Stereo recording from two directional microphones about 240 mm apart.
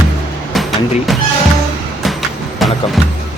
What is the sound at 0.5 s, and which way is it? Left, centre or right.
Vehicle, centre.